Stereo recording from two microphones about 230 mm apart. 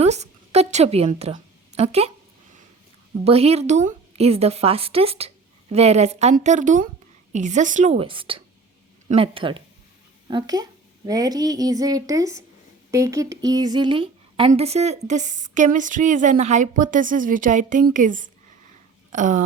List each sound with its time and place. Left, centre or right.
0.0 s a woman's voice: right
3.2 s a woman's voice: right